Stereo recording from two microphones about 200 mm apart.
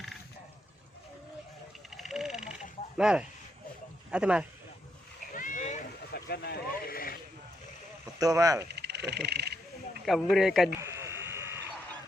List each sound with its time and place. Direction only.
2.0 s a sound: centre (ahead or behind)
3.0 s a man's voice: 5° right (ahead or behind)
5.3 s splash: 40° left (ahead or behind)
6.1 s vehicle: 55° left (ahead or behind)
8.2 s speech: 15° right (ahead or behind)
8.7 s a sound: 55° right (ahead or behind)
10.1 s a man's voice: centre (ahead or behind)
10.8 s frog: 15° right (ahead or behind)